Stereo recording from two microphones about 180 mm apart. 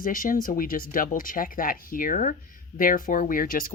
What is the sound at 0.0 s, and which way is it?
Speech, 50° left (ahead or behind).